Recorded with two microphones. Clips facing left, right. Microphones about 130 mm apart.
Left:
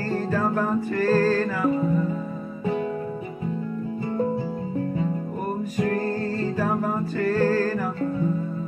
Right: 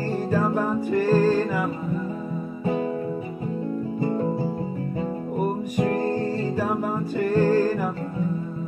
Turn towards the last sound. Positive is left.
turn(degrees=-15)  # may be behind; listen again after turning